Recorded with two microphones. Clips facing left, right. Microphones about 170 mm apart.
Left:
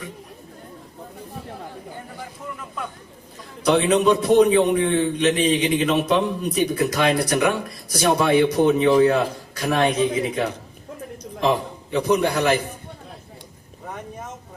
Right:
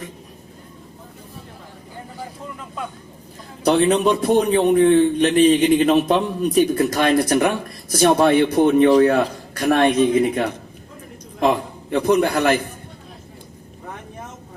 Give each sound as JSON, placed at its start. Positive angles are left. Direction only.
{"t": 3.6, "sound": "a man's voice", "side_deg": -40}